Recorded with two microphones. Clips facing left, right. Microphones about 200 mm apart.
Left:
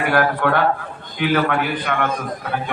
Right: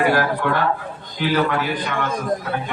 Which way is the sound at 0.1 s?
60° left (ahead or behind).